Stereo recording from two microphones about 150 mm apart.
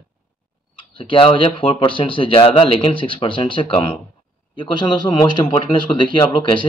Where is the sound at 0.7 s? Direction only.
35° left (ahead or behind).